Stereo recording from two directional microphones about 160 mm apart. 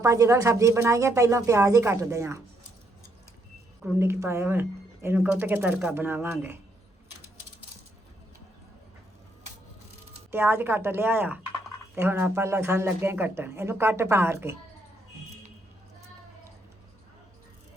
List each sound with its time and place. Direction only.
0.0 s speech: 20° right (ahead or behind)
3.8 s speech: 15° right (ahead or behind)
10.3 s speech: 15° right (ahead or behind)